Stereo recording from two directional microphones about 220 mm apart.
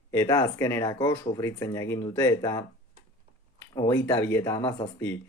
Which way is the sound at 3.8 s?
10° left (ahead or behind).